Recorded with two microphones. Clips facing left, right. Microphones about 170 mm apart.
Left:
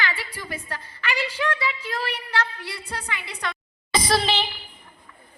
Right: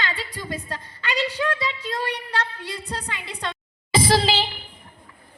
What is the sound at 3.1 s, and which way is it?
A woman's voice, 25° right (ahead or behind).